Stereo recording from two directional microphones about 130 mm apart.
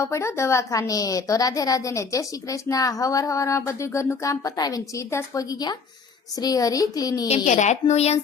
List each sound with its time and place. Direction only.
0.0 s a woman's voice: 20° left (ahead or behind)
7.4 s a woman's voice: 65° left (ahead or behind)